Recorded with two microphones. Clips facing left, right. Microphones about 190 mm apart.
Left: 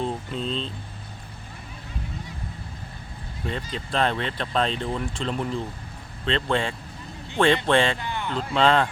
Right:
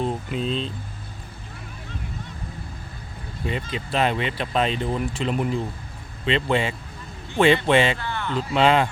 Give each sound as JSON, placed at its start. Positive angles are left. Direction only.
{"t": 0.0, "sound": "a sound", "side_deg": -10}
{"t": 3.4, "sound": "speech", "side_deg": -10}
{"t": 7.9, "sound": "speech", "side_deg": 15}
{"t": 8.4, "sound": "speech", "side_deg": -10}